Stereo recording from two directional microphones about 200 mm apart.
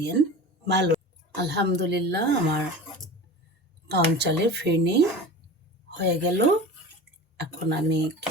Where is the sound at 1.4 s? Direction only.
55° right (ahead or behind).